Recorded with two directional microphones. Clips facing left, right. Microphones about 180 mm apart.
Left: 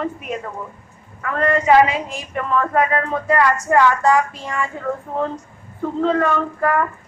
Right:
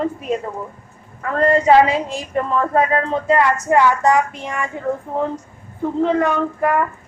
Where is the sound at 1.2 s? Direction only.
30° right (ahead or behind).